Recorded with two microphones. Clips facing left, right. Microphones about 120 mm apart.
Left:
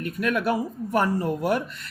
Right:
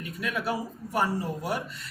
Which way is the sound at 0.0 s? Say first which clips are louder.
Left 7 dB; 55° left (ahead or behind).